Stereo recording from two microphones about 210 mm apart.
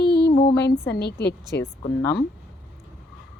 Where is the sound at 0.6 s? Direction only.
50° left (ahead or behind).